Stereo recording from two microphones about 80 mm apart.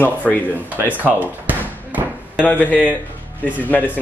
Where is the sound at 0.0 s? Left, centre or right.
Left.